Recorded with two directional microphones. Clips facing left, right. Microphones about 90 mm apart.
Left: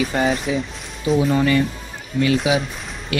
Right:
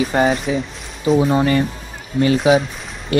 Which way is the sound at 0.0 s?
35° right (ahead or behind).